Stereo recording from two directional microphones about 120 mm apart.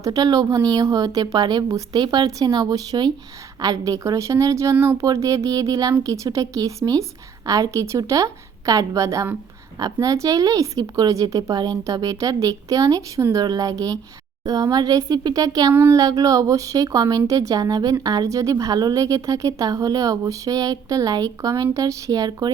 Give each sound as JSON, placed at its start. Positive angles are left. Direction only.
{"t": 0.0, "sound": "speech", "side_deg": -30}